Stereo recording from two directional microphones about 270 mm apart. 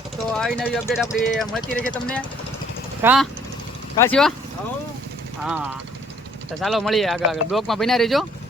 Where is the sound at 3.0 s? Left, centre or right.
Centre.